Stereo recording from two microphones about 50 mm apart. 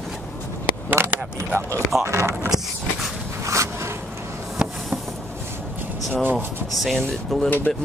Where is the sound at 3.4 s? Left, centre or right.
Right.